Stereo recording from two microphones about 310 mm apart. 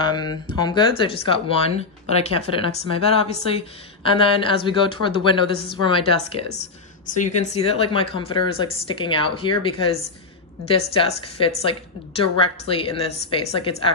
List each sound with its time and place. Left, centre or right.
0.0 s a woman's voice: centre
7.4 s speech: centre